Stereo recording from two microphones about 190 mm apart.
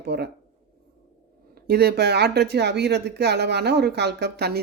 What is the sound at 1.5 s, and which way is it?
Speech, 55° right (ahead or behind).